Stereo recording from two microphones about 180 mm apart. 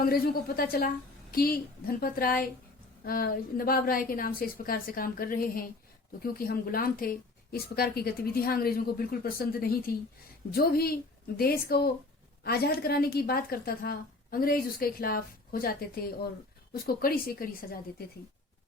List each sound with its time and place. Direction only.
0.0 s a woman's voice: 55° left (ahead or behind)